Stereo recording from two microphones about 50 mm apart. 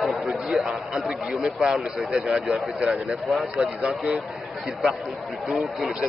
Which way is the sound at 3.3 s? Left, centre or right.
Centre.